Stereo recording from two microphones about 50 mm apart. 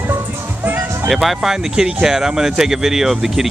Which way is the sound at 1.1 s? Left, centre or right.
Centre.